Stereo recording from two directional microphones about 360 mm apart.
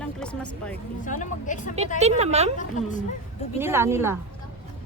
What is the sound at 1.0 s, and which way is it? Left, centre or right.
Speech, left.